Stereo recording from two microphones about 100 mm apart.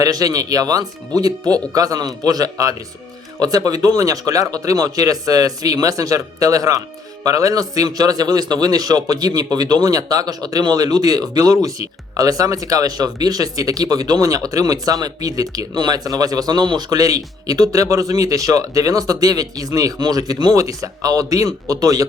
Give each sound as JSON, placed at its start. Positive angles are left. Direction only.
{"t": 0.0, "sound": "a man's voice", "side_deg": -35}